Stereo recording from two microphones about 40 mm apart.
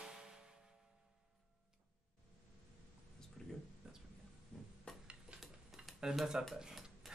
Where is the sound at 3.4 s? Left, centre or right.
Centre.